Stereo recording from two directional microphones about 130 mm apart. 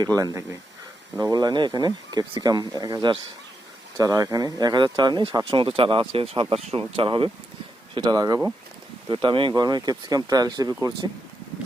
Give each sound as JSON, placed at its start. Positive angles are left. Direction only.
{"t": 0.2, "sound": "speech", "side_deg": -25}
{"t": 7.9, "sound": "speech", "side_deg": -30}
{"t": 9.0, "sound": "speech", "side_deg": -40}